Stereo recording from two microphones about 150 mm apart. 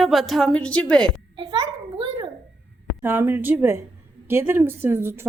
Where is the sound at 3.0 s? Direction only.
15° right (ahead or behind).